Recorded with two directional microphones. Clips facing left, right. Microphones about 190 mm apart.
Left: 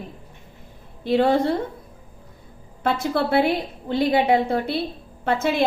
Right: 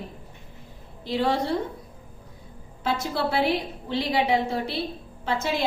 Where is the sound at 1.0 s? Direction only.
55° left (ahead or behind).